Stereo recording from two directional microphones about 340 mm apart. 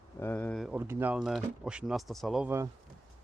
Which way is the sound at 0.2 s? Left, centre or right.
Centre.